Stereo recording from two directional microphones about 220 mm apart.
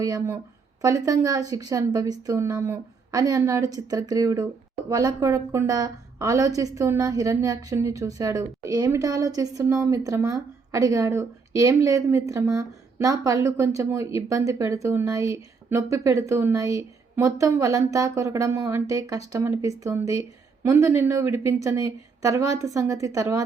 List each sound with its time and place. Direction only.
0.0 s a woman's voice: 15° right (ahead or behind)